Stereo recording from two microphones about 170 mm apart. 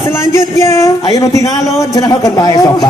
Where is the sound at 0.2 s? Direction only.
15° left (ahead or behind).